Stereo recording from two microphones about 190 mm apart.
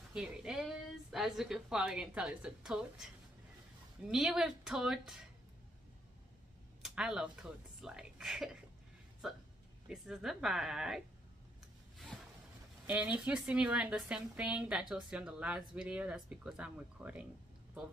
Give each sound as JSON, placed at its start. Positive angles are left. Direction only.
{"t": 0.1, "sound": "a woman's voice", "side_deg": -5}
{"t": 4.1, "sound": "a woman's voice", "side_deg": 0}
{"t": 6.8, "sound": "a woman's voice", "side_deg": -5}
{"t": 12.1, "sound": "a sound", "side_deg": 0}
{"t": 12.8, "sound": "a woman's voice", "side_deg": -10}